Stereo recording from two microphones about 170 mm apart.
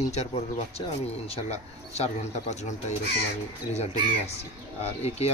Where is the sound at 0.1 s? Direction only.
40° left (ahead or behind).